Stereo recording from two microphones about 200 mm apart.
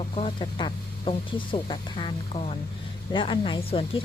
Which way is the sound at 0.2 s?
25° left (ahead or behind).